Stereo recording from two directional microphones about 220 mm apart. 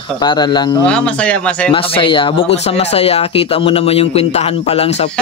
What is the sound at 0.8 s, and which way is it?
Speech, 5° left (ahead or behind).